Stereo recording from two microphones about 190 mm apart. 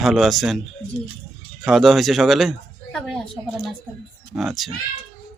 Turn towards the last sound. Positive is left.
turn(degrees=0)  # may be behind; listen again after turning